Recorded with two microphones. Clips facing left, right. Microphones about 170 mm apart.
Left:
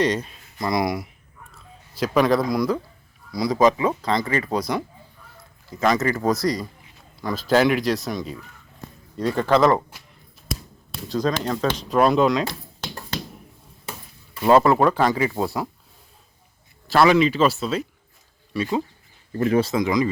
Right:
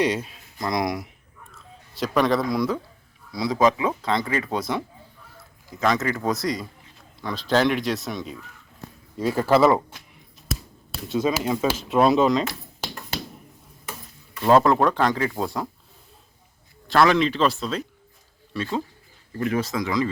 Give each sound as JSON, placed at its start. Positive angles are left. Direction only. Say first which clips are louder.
{"t": 0.0, "sound": "speech", "louder": "left 1 dB", "side_deg": -5}
{"t": 5.8, "sound": "speech", "louder": "left 3 dB", "side_deg": 0}
{"t": 9.9, "sound": "a sound", "louder": "right 1 dB", "side_deg": 0}
{"t": 14.4, "sound": "speech", "louder": "left 1 dB", "side_deg": 5}
{"t": 16.9, "sound": "speech", "louder": "left 2 dB", "side_deg": 5}
{"t": 19.3, "sound": "speech", "louder": "left 5 dB", "side_deg": 35}